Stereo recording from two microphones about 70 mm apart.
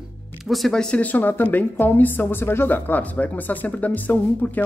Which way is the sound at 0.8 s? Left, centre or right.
Centre.